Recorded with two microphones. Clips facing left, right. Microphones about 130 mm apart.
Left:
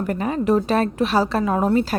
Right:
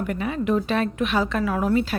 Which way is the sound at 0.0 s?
40° left (ahead or behind).